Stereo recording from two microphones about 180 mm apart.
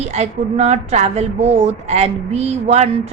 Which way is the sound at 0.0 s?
40° right (ahead or behind).